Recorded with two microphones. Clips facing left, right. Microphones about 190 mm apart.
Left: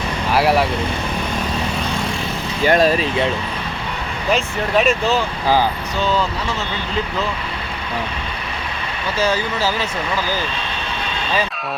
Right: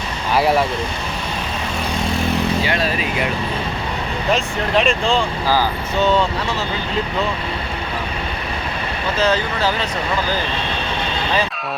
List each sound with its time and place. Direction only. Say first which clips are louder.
0.3 s speech: even; 5° left (ahead or behind)
2.6 s speech: left 6 dB; 40° left (ahead or behind)
4.3 s speech: left 1 dB; centre (ahead or behind)
9.1 s speech: right 1 dB; 10° left (ahead or behind)